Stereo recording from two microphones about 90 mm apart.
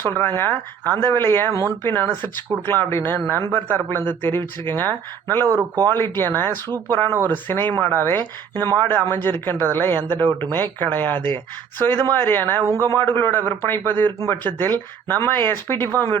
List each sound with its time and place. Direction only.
0.0 s speech: 25° left (ahead or behind)
5.5 s speech: 45° right (ahead or behind)
6.0 s speech: 25° left (ahead or behind)